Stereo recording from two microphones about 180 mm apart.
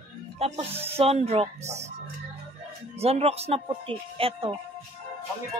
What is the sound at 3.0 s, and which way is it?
A woman's voice, 35° right (ahead or behind).